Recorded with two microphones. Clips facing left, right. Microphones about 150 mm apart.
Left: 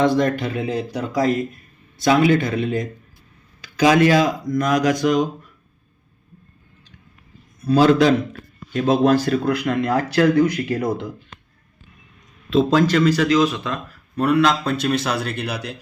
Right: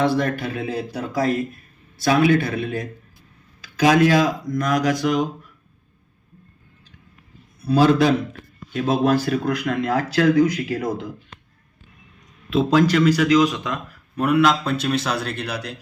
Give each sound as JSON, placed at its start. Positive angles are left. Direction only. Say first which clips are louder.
{"t": 0.0, "sound": "speech", "louder": "left 3 dB", "side_deg": -5}
{"t": 3.6, "sound": "a sound", "louder": "left 1 dB", "side_deg": 0}
{"t": 4.3, "sound": "speech", "louder": "left 2 dB", "side_deg": 0}
{"t": 7.6, "sound": "speech", "louder": "left 2 dB", "side_deg": -10}
{"t": 10.3, "sound": "speech", "louder": "even", "side_deg": 60}
{"t": 10.6, "sound": "speech", "louder": "left 2 dB", "side_deg": -5}
{"t": 12.5, "sound": "speech", "louder": "left 1 dB", "side_deg": -10}